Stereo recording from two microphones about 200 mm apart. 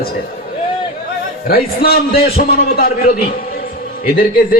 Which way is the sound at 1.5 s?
50° left (ahead or behind).